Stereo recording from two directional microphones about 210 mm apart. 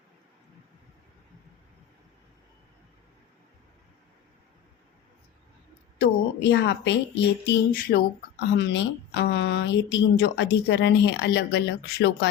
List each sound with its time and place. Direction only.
6.0 s a woman's voice: 55° left (ahead or behind)
7.4 s a sound: 50° left (ahead or behind)
8.5 s a woman's voice: 55° left (ahead or behind)